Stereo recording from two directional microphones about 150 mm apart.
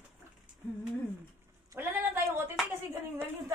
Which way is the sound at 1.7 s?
15° right (ahead or behind).